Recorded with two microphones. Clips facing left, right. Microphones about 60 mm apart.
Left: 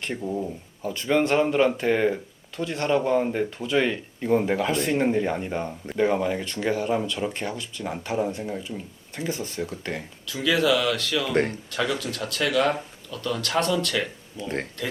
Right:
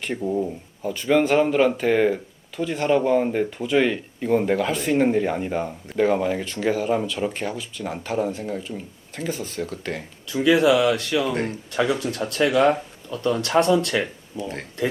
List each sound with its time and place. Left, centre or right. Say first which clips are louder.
0.0 s speech: right 4 dB; centre
10.2 s speech: right 5 dB; centre
14.4 s speech: left 3 dB; left